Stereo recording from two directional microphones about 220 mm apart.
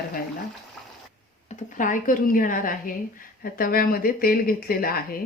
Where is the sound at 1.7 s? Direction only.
35° left (ahead or behind).